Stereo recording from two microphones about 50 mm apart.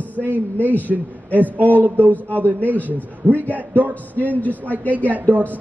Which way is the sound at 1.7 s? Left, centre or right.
Right.